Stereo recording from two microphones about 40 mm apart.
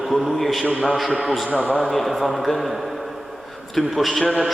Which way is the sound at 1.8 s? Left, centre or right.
Centre.